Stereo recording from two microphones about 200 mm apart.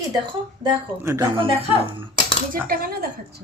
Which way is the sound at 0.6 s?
15° right (ahead or behind).